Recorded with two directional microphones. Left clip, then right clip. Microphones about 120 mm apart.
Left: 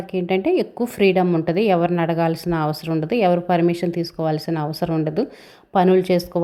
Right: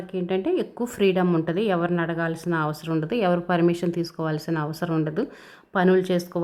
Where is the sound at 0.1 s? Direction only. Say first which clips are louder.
Left 5 dB; 20° left (ahead or behind).